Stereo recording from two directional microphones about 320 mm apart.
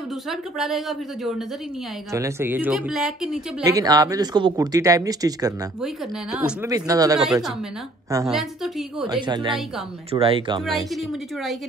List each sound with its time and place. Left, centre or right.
0.3 s a woman's voice: centre
9.2 s speech: centre
11.0 s a woman's voice: centre